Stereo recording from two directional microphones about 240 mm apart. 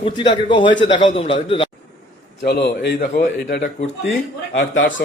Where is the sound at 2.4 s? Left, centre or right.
Left.